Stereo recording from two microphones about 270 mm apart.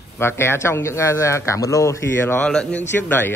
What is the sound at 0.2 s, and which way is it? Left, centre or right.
A man's voice, centre.